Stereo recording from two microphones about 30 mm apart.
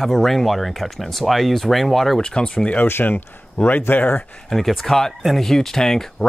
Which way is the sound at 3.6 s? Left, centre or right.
Left.